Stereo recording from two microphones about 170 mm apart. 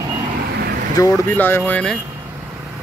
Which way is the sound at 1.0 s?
10° left (ahead or behind).